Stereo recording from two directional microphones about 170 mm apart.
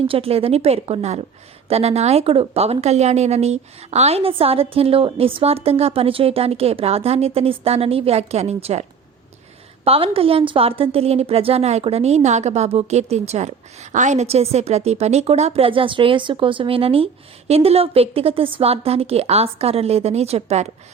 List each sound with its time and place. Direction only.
0.1 s a woman's voice: 35° right (ahead or behind)